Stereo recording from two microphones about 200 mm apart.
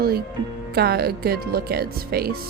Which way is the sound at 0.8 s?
50° right (ahead or behind).